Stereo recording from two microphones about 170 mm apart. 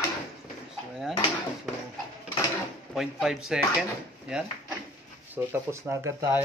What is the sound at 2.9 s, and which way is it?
Speech, centre (ahead or behind).